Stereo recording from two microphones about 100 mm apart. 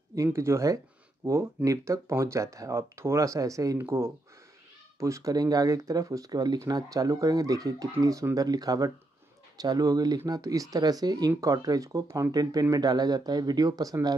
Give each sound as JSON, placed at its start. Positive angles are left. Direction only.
{"t": 0.1, "sound": "speech", "side_deg": -30}